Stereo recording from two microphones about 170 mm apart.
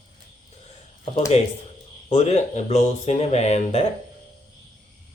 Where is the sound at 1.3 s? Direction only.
35° left (ahead or behind).